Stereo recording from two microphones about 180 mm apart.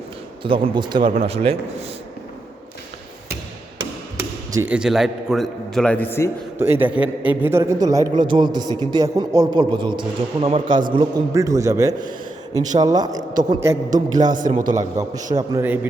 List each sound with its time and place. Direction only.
0.4 s a man's voice: 30° right (ahead or behind)
1.1 s speech: 35° right (ahead or behind)
4.5 s a man's voice: 10° right (ahead or behind); by 6.3 s 15° left (ahead or behind)
6.6 s a man's voice: 10° right (ahead or behind)
14.3 s a man's voice: 45° right (ahead or behind)
14.9 s a man's voice: 20° right (ahead or behind)